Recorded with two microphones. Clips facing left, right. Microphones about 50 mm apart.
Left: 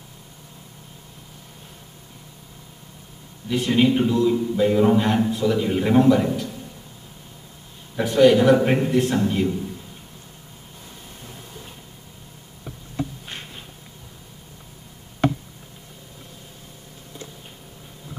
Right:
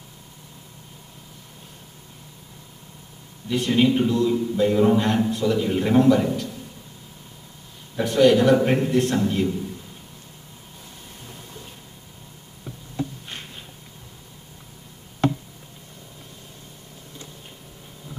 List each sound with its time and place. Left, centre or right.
3.4 s a man's voice: centre
7.9 s a man's voice: centre
13.3 s a sound: centre